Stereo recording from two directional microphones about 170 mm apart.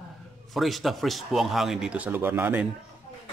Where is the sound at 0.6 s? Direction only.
Centre (ahead or behind).